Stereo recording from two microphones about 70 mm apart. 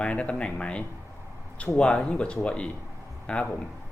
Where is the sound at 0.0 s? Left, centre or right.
Centre.